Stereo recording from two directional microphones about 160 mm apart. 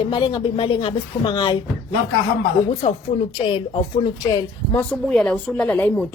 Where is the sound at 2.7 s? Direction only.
40° left (ahead or behind).